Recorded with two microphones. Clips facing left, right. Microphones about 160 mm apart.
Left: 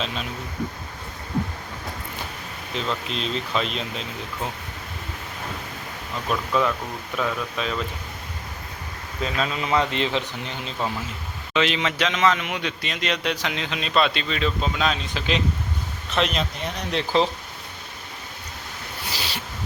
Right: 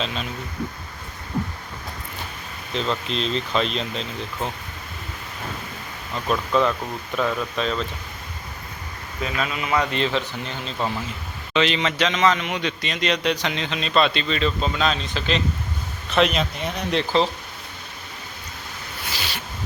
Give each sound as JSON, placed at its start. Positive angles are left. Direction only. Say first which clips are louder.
{"t": 0.0, "sound": "a man's voice", "louder": "right 1 dB", "side_deg": 5}
{"t": 2.7, "sound": "a man's voice", "louder": "right 3 dB", "side_deg": 5}
{"t": 6.2, "sound": "a man's voice", "louder": "right 2 dB", "side_deg": 5}
{"t": 9.2, "sound": "speech", "louder": "left 1 dB", "side_deg": 30}
{"t": 11.5, "sound": "a man's voice", "louder": "right 2 dB", "side_deg": 5}
{"t": 16.1, "sound": "a man's voice", "louder": "right 4 dB", "side_deg": -5}
{"t": 16.9, "sound": "speech", "louder": "right 1 dB", "side_deg": 10}
{"t": 19.0, "sound": "a sound", "louder": "even", "side_deg": 35}